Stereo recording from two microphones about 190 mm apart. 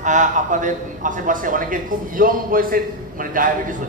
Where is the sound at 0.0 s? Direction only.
40° right (ahead or behind).